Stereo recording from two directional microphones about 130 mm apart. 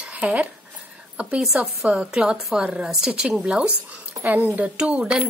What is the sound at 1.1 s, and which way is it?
A woman's voice, 5° right (ahead or behind).